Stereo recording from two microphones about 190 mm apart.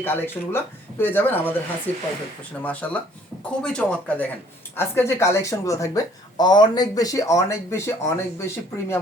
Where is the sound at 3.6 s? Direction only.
5° left (ahead or behind).